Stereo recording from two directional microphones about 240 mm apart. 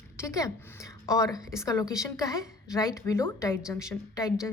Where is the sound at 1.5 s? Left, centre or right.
Centre.